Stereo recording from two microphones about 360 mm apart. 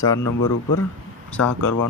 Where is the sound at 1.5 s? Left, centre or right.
Left.